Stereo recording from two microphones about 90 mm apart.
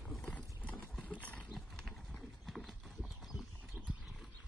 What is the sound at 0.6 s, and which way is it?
Clip-clop, 15° left (ahead or behind).